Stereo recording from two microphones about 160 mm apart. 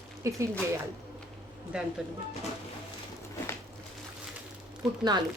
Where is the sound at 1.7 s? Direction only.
5° right (ahead or behind).